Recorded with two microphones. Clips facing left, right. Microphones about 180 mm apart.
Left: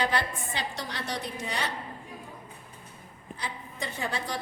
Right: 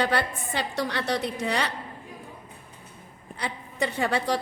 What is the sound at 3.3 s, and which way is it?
A woman's voice, 70° right (ahead or behind).